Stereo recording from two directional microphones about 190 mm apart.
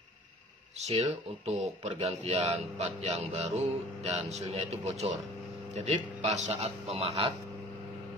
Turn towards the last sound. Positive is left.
turn(degrees=-25)  # may be behind; listen again after turning